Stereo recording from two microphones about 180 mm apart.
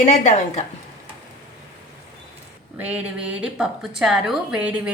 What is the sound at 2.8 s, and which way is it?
A woman's voice, 10° right (ahead or behind).